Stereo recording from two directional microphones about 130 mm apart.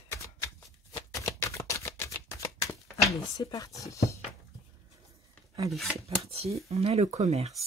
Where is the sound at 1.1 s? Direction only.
25° left (ahead or behind).